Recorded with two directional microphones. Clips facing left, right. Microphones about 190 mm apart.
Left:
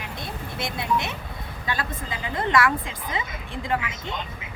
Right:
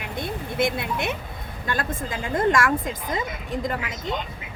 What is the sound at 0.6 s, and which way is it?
A woman's voice, 55° right (ahead or behind).